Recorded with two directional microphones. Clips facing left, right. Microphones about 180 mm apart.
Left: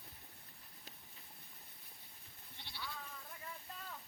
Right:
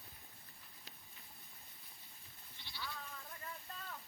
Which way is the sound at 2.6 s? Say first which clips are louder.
Left 4 dB; 60° left (ahead or behind).